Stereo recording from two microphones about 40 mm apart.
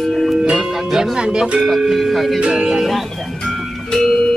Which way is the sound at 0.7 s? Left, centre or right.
Centre.